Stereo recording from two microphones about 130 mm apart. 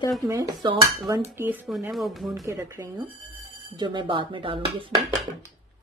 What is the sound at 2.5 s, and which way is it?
Speech, 20° right (ahead or behind).